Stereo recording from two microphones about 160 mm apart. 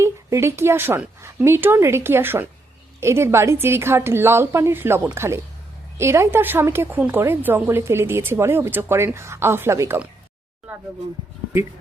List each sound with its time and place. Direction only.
0.0 s a woman's voice: 15° right (ahead or behind)